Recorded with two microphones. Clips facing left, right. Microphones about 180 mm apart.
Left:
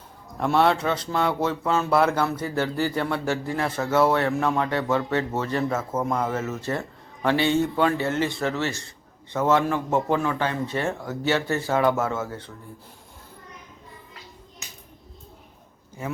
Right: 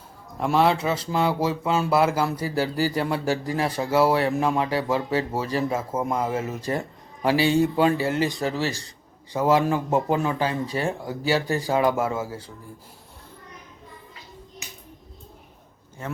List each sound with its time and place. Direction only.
0.3 s speech: centre (ahead or behind)
8.6 s a man's voice: 35° right (ahead or behind)
9.3 s speech: 10° right (ahead or behind)
16.0 s speech: 10° left (ahead or behind)